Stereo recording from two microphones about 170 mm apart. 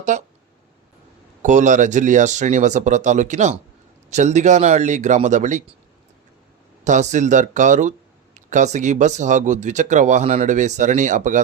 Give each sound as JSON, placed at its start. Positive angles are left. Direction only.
{"t": 0.1, "sound": "speech", "side_deg": -45}
{"t": 1.4, "sound": "speech", "side_deg": -45}
{"t": 6.8, "sound": "speech", "side_deg": -45}